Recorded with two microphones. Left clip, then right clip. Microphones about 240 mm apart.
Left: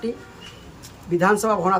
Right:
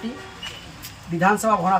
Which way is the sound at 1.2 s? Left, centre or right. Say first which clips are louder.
Even; left.